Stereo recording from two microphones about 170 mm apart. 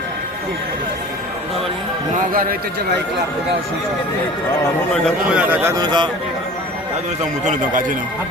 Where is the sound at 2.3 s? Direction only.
55° right (ahead or behind).